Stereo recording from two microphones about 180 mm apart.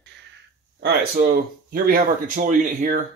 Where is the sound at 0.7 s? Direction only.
55° right (ahead or behind).